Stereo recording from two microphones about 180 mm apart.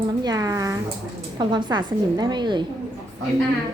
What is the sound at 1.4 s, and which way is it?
A woman's voice, 25° right (ahead or behind).